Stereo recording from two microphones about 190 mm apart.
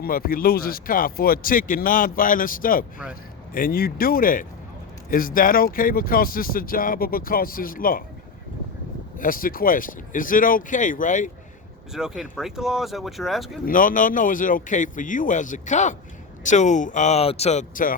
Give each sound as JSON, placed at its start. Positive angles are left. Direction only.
{"t": 0.0, "sound": "speech", "side_deg": 50}
{"t": 9.1, "sound": "speech", "side_deg": 45}
{"t": 11.9, "sound": "speech", "side_deg": -5}
{"t": 13.7, "sound": "speech", "side_deg": 45}